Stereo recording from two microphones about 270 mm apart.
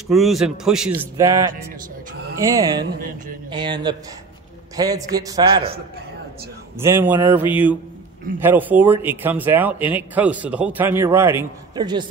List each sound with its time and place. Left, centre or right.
0.1 s a man's voice: centre
6.8 s speech: centre